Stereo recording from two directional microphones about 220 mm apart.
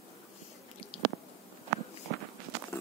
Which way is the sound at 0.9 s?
25° left (ahead or behind).